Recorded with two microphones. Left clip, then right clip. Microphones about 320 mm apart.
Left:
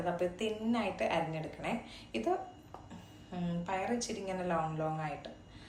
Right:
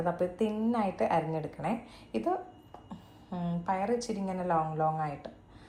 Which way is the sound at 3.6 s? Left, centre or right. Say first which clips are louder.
Right 5 dB; centre.